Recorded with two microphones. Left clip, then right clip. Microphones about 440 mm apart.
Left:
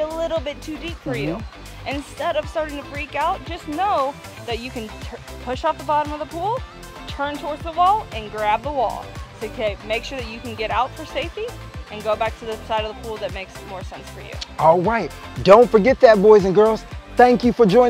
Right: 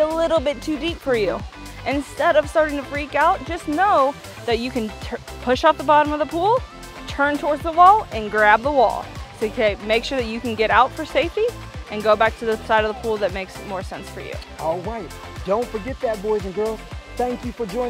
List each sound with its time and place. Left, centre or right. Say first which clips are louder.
0.0 s speech: right 5 dB; right
14.6 s speech: left 10 dB; left